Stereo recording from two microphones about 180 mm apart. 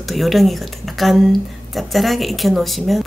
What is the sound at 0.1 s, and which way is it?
Speech, centre (ahead or behind).